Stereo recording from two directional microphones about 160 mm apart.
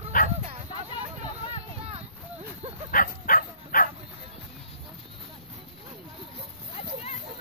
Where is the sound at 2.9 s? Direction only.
60° left (ahead or behind).